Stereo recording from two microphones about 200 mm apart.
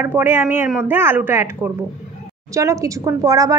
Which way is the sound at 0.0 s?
10° right (ahead or behind).